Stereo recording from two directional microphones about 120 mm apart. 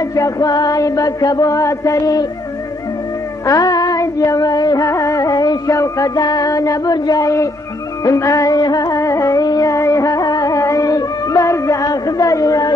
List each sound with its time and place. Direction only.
0.0 s chant: 25° left (ahead or behind)
3.4 s music: 30° left (ahead or behind)